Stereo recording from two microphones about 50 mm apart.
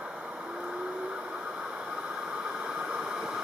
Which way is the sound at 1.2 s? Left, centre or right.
Right.